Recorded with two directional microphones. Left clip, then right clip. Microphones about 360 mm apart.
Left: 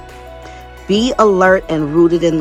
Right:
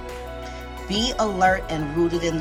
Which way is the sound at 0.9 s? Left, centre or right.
Centre.